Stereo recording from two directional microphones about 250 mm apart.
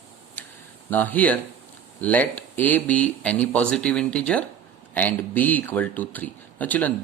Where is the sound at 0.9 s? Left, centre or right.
Centre.